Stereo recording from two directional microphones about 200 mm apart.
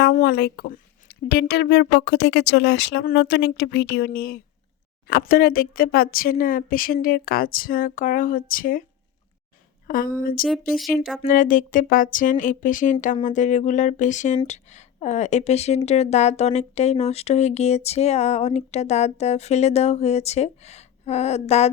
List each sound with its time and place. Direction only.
0.0 s speech: 55° left (ahead or behind)
9.8 s a woman's voice: 45° left (ahead or behind)